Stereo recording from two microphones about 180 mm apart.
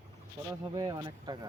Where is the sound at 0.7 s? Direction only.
25° right (ahead or behind).